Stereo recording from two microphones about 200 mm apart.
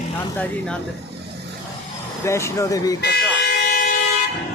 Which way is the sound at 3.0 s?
50° left (ahead or behind).